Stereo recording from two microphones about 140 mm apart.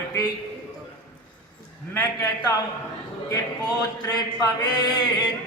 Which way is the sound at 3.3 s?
25° left (ahead or behind).